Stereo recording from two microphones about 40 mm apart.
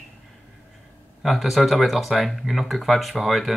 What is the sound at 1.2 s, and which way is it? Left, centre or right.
Speech, centre.